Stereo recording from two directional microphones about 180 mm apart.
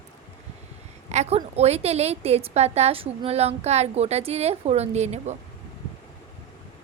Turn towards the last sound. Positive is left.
turn(degrees=-40)  # may be behind; listen again after turning